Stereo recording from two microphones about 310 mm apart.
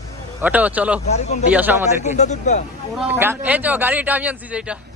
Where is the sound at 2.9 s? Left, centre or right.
Centre.